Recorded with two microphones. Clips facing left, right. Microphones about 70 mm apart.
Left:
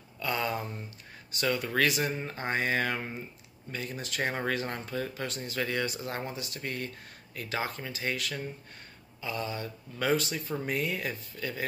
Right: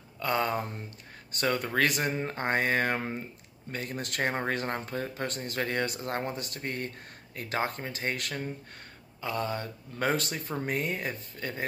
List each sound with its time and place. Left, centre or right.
0.2 s speech: right
10.5 s speech: right